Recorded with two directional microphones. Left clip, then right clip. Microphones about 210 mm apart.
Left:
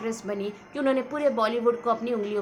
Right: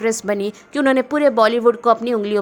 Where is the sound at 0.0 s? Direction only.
50° right (ahead or behind).